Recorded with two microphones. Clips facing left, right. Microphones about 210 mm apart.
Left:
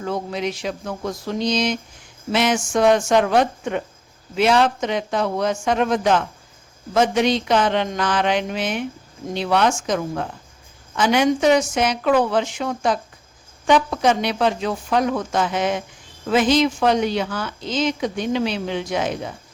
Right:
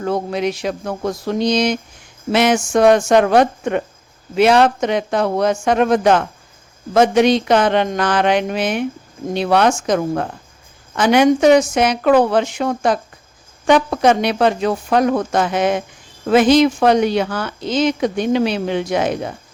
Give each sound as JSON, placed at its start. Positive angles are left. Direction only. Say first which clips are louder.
{"t": 0.0, "sound": "speech", "louder": "right 5 dB", "side_deg": -55}
{"t": 10.9, "sound": "speech", "louder": "right 5 dB", "side_deg": -65}